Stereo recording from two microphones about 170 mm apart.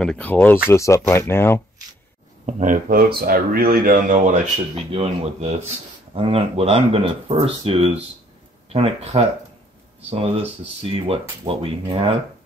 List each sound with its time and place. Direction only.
0.0 s speech: 5° left (ahead or behind)
2.4 s speech: 50° right (ahead or behind)
4.9 s speech: 35° right (ahead or behind)